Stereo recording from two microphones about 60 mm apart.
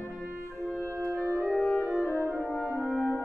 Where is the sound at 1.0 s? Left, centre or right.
Centre.